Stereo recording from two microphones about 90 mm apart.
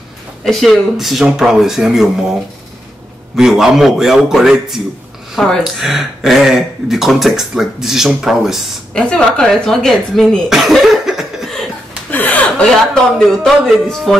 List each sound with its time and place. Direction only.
0.5 s speech: centre (ahead or behind)
3.3 s speech: 5° right (ahead or behind)
5.3 s speech: 5° left (ahead or behind)
8.9 s speech: 10° left (ahead or behind)
12.1 s chuckle: 20° left (ahead or behind)
12.9 s speech: 5° left (ahead or behind)